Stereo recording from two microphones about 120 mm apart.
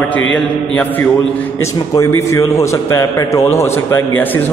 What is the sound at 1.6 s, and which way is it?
A man's voice, 25° left (ahead or behind).